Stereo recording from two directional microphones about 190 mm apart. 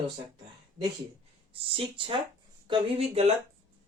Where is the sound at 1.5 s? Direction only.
30° right (ahead or behind).